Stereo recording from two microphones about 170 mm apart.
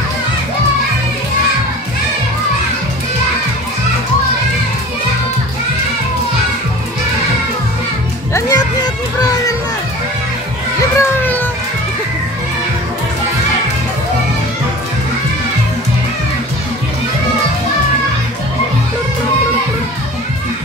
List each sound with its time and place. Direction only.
8.3 s children playing: 20° left (ahead or behind)
10.8 s children playing: 15° left (ahead or behind)